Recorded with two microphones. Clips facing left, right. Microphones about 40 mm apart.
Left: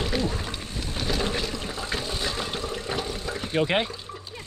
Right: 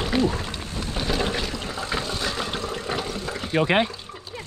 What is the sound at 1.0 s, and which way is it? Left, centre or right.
Boat, centre.